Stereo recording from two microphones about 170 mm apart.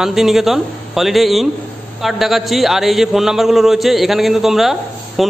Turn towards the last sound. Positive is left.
turn(degrees=0)  # may be behind; listen again after turning